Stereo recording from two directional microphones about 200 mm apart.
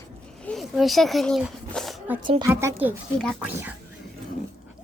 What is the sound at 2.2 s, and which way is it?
Speech, 25° right (ahead or behind).